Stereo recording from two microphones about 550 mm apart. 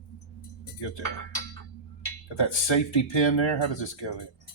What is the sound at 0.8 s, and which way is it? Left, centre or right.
Speech, left.